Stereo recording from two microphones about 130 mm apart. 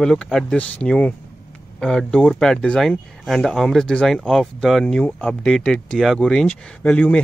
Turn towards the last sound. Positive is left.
turn(degrees=10)  # may be behind; listen again after turning